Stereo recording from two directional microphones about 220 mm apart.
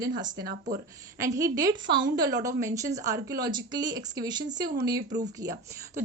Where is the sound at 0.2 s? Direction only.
20° right (ahead or behind).